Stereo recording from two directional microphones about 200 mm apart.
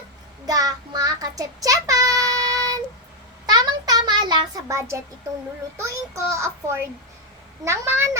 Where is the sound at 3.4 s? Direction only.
20° right (ahead or behind).